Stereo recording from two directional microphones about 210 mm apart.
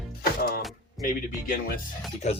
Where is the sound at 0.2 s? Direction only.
45° left (ahead or behind).